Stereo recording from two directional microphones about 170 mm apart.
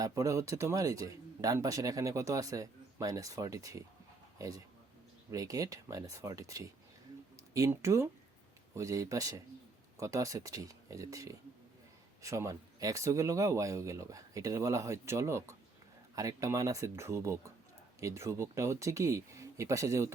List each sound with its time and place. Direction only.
0.0 s speech: 20° right (ahead or behind)